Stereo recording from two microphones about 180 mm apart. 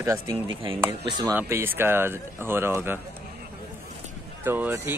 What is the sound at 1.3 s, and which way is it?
Speech, 10° right (ahead or behind).